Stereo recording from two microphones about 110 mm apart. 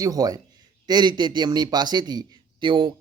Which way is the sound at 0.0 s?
35° right (ahead or behind).